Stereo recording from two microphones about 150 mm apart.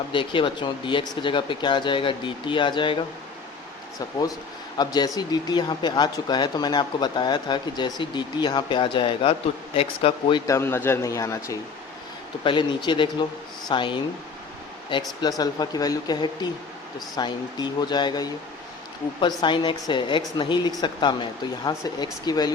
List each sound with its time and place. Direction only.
0.1 s speech: 35° left (ahead or behind)
4.8 s speech: 25° left (ahead or behind)
10.4 s speech: 20° left (ahead or behind)
12.5 s speech: 30° left (ahead or behind)
15.2 s speech: 25° left (ahead or behind)